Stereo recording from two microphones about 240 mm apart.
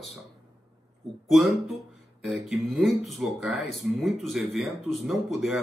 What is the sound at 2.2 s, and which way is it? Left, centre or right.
A man's voice, centre.